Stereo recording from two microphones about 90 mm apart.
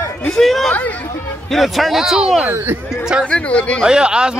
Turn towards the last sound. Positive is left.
turn(degrees=-10)  # may be behind; listen again after turning